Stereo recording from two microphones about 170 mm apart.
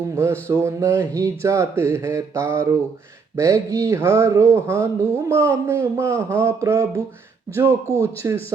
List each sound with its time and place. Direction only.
0.2 s speech: 15° right (ahead or behind)